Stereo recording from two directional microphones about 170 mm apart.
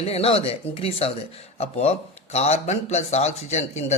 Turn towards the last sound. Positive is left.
turn(degrees=40)  # may be behind; listen again after turning